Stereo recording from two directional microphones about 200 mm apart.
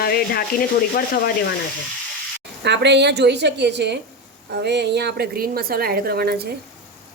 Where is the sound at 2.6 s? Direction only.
60° right (ahead or behind).